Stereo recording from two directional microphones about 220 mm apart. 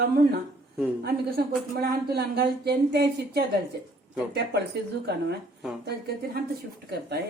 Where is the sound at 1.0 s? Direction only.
45° right (ahead or behind).